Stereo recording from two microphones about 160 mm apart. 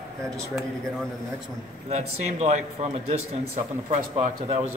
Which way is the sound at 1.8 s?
45° right (ahead or behind).